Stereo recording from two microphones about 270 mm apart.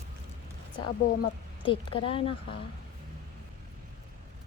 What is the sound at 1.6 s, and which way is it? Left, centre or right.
Speech, centre.